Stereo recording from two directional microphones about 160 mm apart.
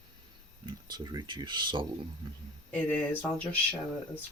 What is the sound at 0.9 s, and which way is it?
Speech, 25° right (ahead or behind).